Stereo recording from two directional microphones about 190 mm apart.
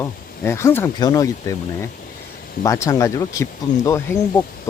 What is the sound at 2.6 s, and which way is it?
Speech, 15° left (ahead or behind).